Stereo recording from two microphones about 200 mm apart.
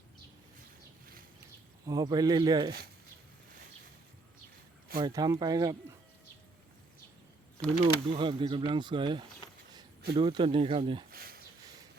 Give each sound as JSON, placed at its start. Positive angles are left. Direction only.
{"t": 1.9, "sound": "speech", "side_deg": -20}
{"t": 4.9, "sound": "speech", "side_deg": -20}
{"t": 7.7, "sound": "speech", "side_deg": -30}
{"t": 11.1, "sound": "a sound", "side_deg": -50}